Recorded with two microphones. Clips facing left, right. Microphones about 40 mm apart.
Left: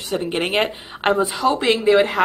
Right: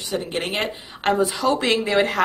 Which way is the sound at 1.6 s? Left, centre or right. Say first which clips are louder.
Left 4 dB; centre.